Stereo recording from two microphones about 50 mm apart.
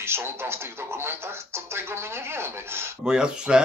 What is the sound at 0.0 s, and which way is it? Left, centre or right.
Speech, right.